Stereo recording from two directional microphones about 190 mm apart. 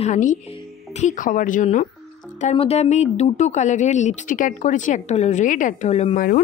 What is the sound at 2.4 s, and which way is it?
Speech, 30° left (ahead or behind).